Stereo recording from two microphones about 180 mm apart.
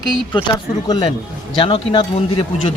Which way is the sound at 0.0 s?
25° left (ahead or behind).